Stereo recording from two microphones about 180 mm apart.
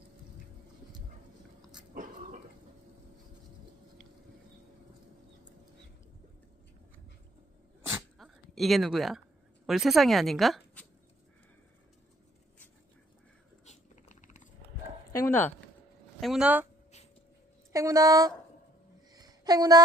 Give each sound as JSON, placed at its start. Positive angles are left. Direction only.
{"t": 8.2, "sound": "speech", "side_deg": 0}
{"t": 13.7, "sound": "a sound", "side_deg": 45}
{"t": 15.1, "sound": "dog", "side_deg": 15}
{"t": 16.2, "sound": "speech", "side_deg": -5}
{"t": 17.7, "sound": "speech", "side_deg": -20}
{"t": 19.1, "sound": "a sound", "side_deg": -20}